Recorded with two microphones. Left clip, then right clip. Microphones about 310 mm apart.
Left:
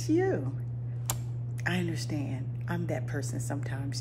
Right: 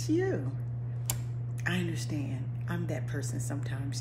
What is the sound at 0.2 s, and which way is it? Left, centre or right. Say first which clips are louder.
Speech: left 3 dB; centre.